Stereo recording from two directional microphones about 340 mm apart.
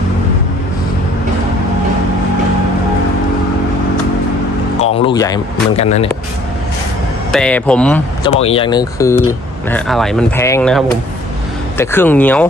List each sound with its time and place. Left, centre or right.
4.8 s a man's voice: centre
7.3 s speech: centre
8.2 s speech: centre